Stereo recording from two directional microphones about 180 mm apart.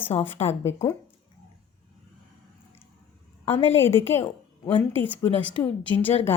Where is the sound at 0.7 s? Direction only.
15° left (ahead or behind).